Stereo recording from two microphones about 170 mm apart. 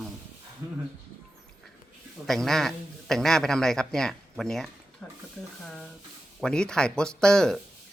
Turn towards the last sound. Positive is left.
turn(degrees=5)  # may be behind; listen again after turning